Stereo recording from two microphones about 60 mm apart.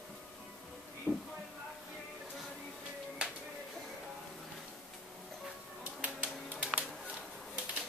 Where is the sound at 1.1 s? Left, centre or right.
Left.